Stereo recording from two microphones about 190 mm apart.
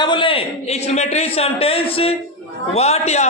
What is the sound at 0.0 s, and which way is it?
A man's voice, 25° left (ahead or behind).